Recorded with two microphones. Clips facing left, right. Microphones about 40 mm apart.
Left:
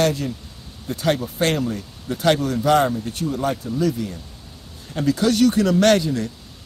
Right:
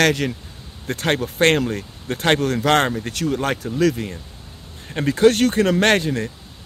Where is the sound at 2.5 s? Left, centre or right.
Right.